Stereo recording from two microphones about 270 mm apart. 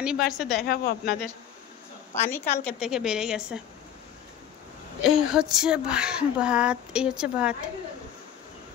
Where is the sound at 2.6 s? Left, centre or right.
Centre.